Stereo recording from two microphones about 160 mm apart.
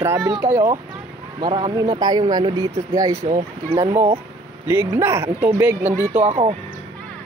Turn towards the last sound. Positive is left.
turn(degrees=-40)  # may be behind; listen again after turning